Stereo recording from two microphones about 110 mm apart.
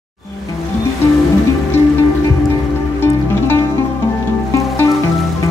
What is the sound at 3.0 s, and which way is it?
Music, 20° left (ahead or behind).